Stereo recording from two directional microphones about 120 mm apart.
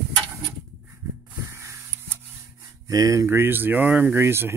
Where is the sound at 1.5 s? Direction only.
25° right (ahead or behind).